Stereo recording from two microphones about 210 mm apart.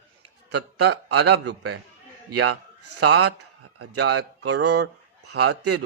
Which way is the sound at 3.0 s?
90° right.